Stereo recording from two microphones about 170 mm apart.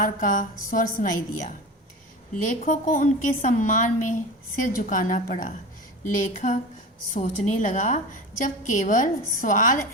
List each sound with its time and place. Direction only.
0.0 s a woman's voice: 50° left (ahead or behind)